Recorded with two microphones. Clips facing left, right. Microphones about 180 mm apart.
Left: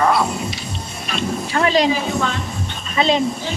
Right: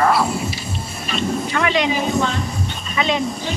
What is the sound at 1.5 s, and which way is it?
Speech, 35° left (ahead or behind).